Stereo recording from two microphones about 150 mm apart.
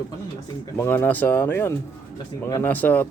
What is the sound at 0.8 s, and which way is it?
Speech, 15° left (ahead or behind).